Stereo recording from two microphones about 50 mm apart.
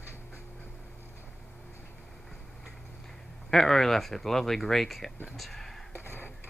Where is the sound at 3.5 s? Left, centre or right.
Centre.